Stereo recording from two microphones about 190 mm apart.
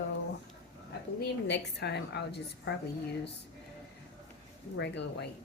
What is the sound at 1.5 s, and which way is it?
A woman's voice, 65° left (ahead or behind).